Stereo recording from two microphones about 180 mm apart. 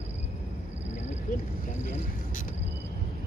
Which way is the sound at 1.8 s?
45° left (ahead or behind).